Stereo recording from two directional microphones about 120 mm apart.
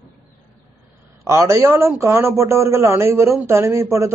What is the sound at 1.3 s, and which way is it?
A man's voice, 25° right (ahead or behind).